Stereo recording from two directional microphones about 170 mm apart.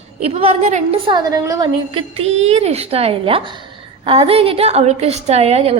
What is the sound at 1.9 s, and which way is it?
A woman's voice, 35° right (ahead or behind).